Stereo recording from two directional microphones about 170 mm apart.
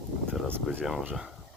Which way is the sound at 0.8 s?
5° right (ahead or behind).